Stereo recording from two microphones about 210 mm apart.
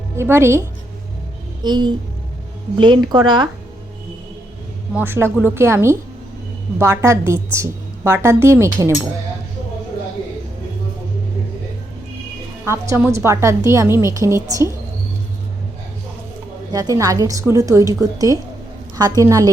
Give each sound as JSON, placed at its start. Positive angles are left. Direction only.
{"t": 0.2, "sound": "a woman's voice", "side_deg": -10}
{"t": 1.6, "sound": "a woman's voice", "side_deg": -20}
{"t": 4.9, "sound": "a woman's voice", "side_deg": -10}
{"t": 12.6, "sound": "a woman's voice", "side_deg": -15}
{"t": 16.7, "sound": "a woman's voice", "side_deg": -15}